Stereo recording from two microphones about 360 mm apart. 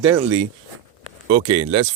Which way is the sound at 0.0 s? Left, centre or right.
Centre.